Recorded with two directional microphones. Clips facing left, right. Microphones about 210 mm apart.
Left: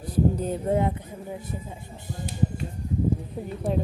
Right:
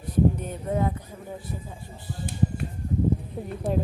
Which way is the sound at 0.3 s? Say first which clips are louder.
Left 4 dB; 30° left (ahead or behind).